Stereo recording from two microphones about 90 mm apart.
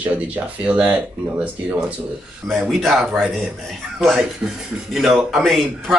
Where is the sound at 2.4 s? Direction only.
Centre (ahead or behind).